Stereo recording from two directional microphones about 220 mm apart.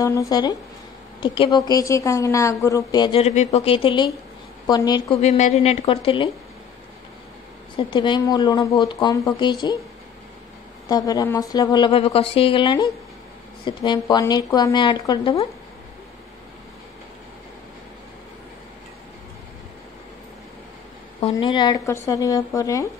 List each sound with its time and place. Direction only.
0.0 s a woman's voice: 15° left (ahead or behind)
5.2 s a woman's voice: 30° left (ahead or behind)
7.7 s a woman's voice: 20° left (ahead or behind)
10.9 s a woman's voice: 15° left (ahead or behind)
21.2 s speech: 25° left (ahead or behind)